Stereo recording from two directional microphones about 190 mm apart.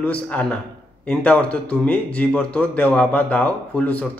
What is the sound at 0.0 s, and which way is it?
Speech, 5° left (ahead or behind).